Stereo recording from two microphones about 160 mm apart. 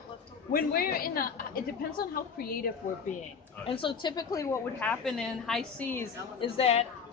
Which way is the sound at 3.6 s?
35° left (ahead or behind).